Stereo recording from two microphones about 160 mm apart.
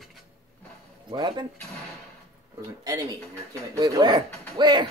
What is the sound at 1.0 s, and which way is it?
Speech, 30° right (ahead or behind).